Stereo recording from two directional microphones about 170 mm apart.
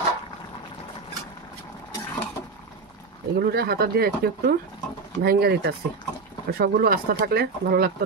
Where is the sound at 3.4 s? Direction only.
65° right (ahead or behind).